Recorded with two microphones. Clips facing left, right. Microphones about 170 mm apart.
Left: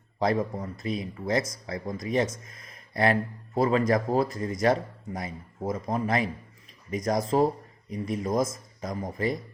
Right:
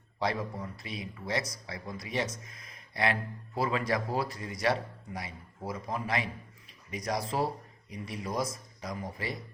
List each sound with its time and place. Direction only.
0.2 s speech: 45° left (ahead or behind)